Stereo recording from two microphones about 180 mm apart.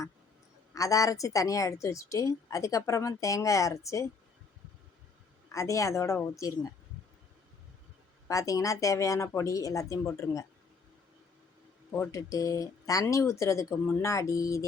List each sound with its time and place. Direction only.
0.7 s a woman's voice: 20° left (ahead or behind)
5.5 s a woman's voice: 15° left (ahead or behind)
8.3 s a woman's voice: 20° left (ahead or behind)
11.9 s a woman's voice: 15° left (ahead or behind)